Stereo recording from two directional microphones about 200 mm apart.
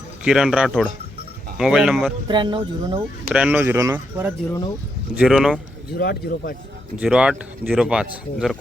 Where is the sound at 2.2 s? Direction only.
25° right (ahead or behind).